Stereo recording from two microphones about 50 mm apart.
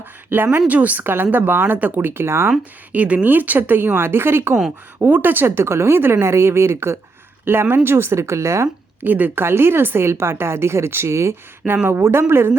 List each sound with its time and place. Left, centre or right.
0.0 s speech: right
0.7 s speech: right
1.0 s speech: right
2.9 s speech: right
4.9 s speech: right
7.4 s speech: right
9.0 s speech: right
9.4 s speech: right
11.9 s speech: right